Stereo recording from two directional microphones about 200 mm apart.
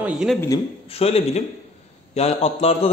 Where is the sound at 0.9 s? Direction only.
30° left (ahead or behind).